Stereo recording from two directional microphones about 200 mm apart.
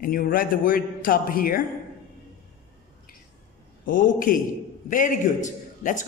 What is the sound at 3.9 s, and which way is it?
A man's voice, 45° left (ahead or behind).